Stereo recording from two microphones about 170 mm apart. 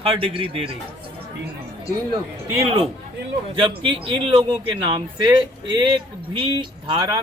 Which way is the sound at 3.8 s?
30° right (ahead or behind).